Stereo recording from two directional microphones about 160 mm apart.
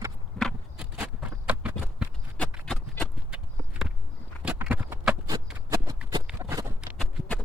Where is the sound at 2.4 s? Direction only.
5° left (ahead or behind).